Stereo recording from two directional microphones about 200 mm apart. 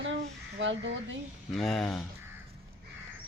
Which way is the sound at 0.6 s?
70° right (ahead or behind).